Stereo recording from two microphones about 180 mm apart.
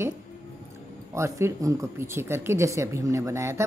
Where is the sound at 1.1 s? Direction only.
15° right (ahead or behind).